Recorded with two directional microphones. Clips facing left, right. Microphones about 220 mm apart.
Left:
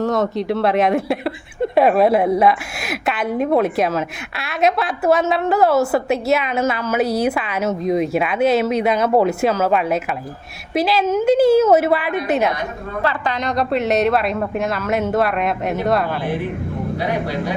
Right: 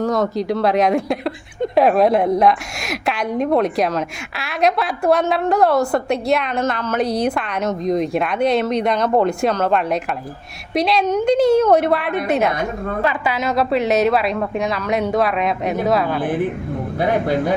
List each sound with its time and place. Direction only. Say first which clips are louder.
0.0 s a woman's voice: even; centre (ahead or behind)
13.0 s a woman's voice: even; 10° right (ahead or behind)
17.0 s speech: right 6 dB; 50° right (ahead or behind)